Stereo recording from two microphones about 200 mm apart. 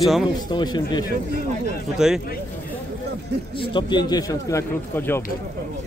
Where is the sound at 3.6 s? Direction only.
25° left (ahead or behind).